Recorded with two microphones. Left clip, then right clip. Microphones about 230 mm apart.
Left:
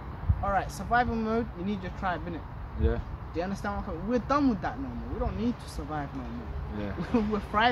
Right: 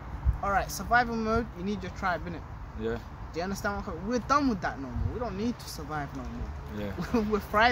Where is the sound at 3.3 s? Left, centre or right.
Right.